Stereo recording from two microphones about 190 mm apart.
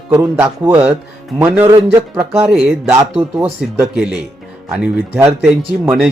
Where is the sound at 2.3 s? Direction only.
Centre (ahead or behind).